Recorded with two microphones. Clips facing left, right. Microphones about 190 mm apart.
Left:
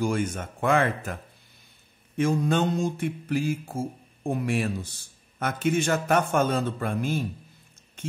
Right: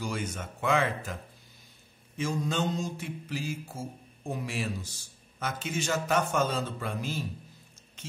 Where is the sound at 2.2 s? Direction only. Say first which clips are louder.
Left 7 dB; 55° left (ahead or behind).